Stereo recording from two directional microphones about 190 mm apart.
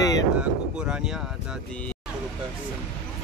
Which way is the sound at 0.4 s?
5° right (ahead or behind).